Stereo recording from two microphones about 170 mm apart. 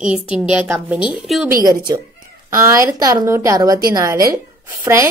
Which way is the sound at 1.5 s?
25° right (ahead or behind).